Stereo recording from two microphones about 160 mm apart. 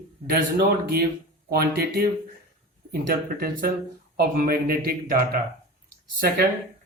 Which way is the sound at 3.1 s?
70° right (ahead or behind).